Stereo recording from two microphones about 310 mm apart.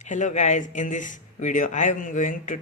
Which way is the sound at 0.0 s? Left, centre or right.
Left.